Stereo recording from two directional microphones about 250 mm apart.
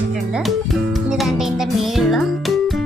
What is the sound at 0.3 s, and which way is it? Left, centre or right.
Music, centre.